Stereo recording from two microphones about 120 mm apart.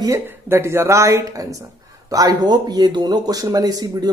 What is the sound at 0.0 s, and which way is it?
Speech, 25° right (ahead or behind).